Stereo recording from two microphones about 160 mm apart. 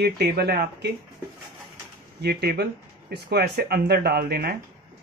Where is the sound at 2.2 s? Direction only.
90° right.